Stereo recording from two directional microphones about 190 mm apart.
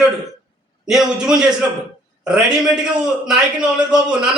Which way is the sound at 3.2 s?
5° right (ahead or behind).